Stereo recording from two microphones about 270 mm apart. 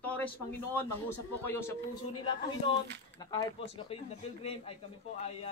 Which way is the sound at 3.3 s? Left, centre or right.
Centre.